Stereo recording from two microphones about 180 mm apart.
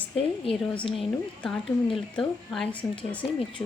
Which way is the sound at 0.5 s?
30° left (ahead or behind).